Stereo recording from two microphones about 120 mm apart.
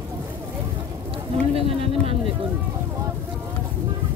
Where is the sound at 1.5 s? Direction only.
55° right (ahead or behind).